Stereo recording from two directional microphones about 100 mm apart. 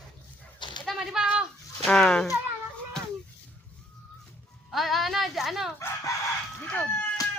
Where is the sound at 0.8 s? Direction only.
Centre (ahead or behind).